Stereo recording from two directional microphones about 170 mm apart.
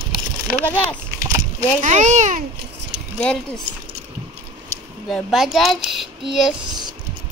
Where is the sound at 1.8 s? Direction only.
45° right (ahead or behind).